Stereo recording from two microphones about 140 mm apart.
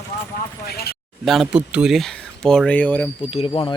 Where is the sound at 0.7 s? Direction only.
90° left.